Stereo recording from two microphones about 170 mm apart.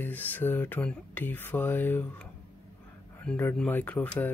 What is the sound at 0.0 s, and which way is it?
Speech, 10° left (ahead or behind).